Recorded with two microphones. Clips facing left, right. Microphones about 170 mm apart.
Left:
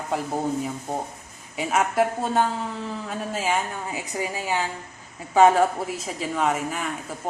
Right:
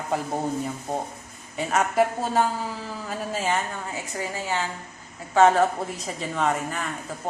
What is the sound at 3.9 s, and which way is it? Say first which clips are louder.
A woman's voice: left 2 dB; 15° left (ahead or behind).